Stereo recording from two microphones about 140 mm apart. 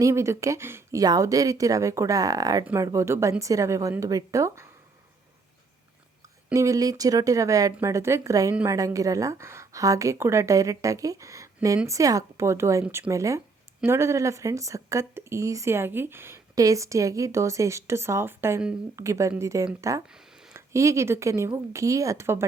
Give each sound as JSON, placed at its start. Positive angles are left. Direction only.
{"t": 0.0, "sound": "a woman's voice", "side_deg": -20}
{"t": 6.5, "sound": "a woman's voice", "side_deg": -25}